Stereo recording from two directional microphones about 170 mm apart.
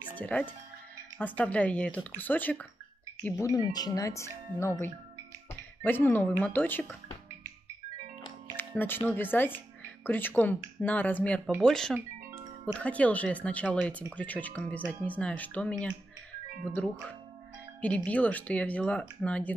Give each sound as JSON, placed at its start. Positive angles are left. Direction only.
{"t": 0.1, "sound": "speech", "side_deg": 10}
{"t": 8.5, "sound": "speech", "side_deg": 10}
{"t": 16.7, "sound": "speech", "side_deg": 10}